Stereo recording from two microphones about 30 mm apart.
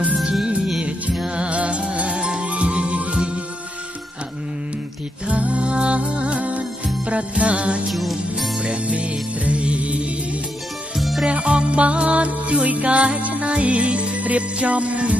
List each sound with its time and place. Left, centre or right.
0.2 s music: right
1.3 s music: right
2.1 s music: right
2.4 s music: right
5.3 s music: right
7.9 s music: centre
8.8 s music: right
11.0 s music: centre
11.2 s music: right
14.2 s music: right